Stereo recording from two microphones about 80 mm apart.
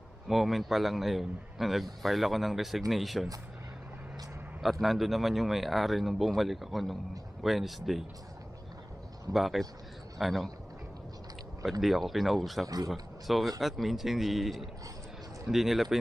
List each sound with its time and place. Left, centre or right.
0.3 s a man's voice: centre
4.6 s a man's voice: centre
9.3 s a man's voice: centre
11.8 s a man's voice: centre
12.6 s speech: right
12.9 s a man's voice: centre